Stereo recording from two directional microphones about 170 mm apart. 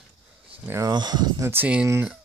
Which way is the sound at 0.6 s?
20° right (ahead or behind).